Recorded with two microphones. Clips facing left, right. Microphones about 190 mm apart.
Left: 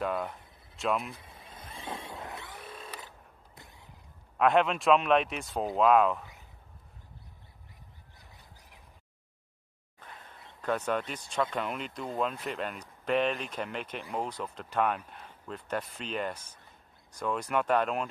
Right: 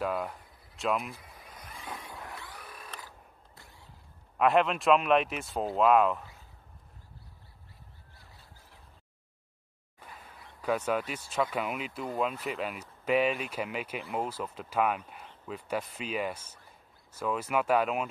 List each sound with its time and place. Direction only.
0.0 s speech: centre (ahead or behind)
1.1 s vehicle: 25° left (ahead or behind)
3.0 s a sound: 20° left (ahead or behind)
4.4 s speech: centre (ahead or behind)
8.2 s a sound: 15° left (ahead or behind)
10.6 s speech: 5° right (ahead or behind)